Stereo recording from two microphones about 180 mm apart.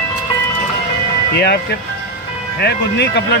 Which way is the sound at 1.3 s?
65° left (ahead or behind).